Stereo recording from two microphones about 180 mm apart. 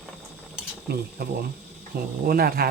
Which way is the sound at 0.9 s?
60° right (ahead or behind).